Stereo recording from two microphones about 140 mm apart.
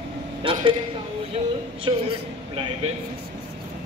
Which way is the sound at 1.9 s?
30° right (ahead or behind).